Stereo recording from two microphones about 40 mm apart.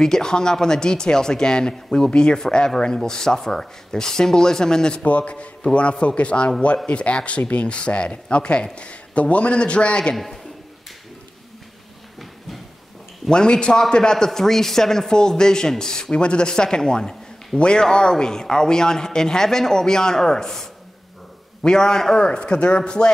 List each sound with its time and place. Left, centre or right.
0.0 s speech: centre
5.0 s a man's voice: left
10.1 s a man's voice: centre
13.3 s speech: left